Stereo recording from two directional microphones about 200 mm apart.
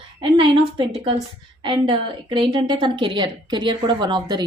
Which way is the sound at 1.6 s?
25° right (ahead or behind).